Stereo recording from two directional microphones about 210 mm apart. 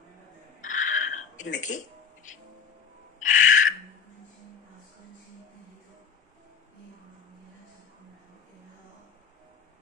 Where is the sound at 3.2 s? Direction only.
35° left (ahead or behind).